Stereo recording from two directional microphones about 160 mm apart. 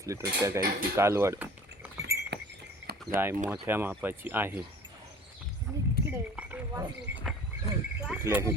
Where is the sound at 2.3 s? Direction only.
90° right.